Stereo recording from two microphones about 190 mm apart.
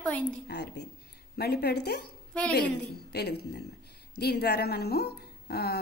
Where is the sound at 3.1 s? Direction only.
60° left (ahead or behind).